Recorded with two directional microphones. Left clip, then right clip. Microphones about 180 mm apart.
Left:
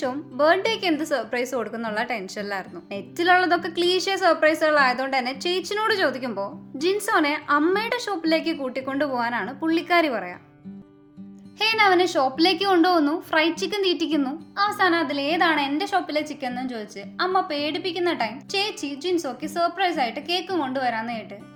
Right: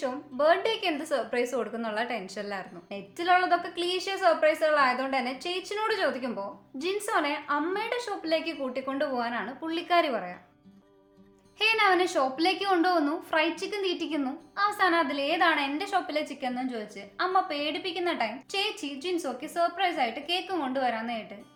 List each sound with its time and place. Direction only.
0.0 s a woman's voice: 45° left (ahead or behind)
11.6 s a woman's voice: 35° left (ahead or behind)